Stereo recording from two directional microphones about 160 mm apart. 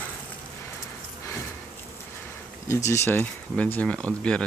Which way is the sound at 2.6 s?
20° left (ahead or behind).